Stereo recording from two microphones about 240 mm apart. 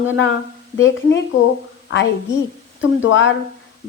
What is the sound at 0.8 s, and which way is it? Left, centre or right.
A woman's voice, left.